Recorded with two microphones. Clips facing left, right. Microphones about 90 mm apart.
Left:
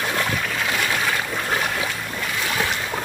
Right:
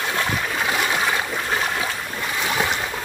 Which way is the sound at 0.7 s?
20° right (ahead or behind).